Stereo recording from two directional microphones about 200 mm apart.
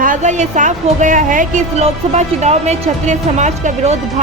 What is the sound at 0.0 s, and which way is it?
A woman's voice, 40° right (ahead or behind).